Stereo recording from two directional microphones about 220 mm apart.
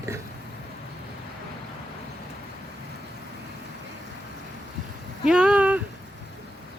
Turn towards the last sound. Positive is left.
turn(degrees=-5)  # may be behind; listen again after turning